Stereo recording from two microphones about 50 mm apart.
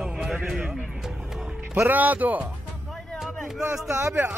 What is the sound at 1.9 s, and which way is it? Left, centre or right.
Speech, right.